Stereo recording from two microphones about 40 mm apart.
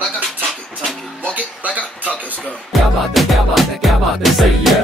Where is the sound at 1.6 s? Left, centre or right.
Right.